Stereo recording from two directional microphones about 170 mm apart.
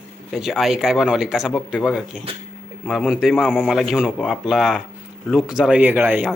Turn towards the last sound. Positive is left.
turn(degrees=-10)  # may be behind; listen again after turning